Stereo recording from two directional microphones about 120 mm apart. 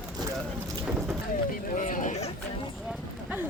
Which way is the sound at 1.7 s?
90° left.